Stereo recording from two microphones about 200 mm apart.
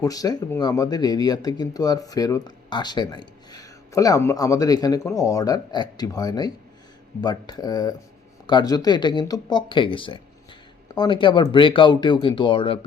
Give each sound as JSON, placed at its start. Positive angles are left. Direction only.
{"t": 0.0, "sound": "speech", "side_deg": 15}